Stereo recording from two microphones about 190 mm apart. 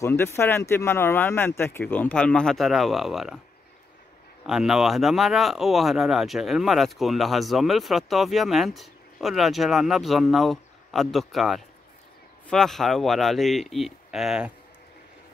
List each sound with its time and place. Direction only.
0.0 s speech: 15° left (ahead or behind)
4.5 s speech: 5° right (ahead or behind)